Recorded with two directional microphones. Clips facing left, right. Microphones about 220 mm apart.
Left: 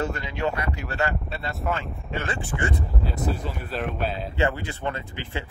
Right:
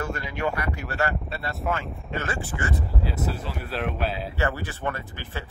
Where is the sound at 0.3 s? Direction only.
25° left (ahead or behind).